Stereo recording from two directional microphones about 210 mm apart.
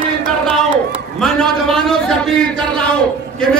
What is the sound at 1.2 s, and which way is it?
Speech, centre (ahead or behind).